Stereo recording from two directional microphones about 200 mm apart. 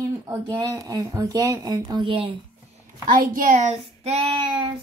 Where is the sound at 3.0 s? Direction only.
45° right (ahead or behind); by 4.6 s 25° right (ahead or behind).